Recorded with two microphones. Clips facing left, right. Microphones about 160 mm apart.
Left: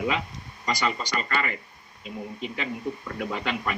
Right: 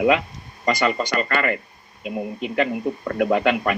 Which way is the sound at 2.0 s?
70° right (ahead or behind).